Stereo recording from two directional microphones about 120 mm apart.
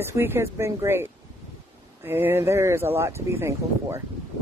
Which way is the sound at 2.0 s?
20° right (ahead or behind).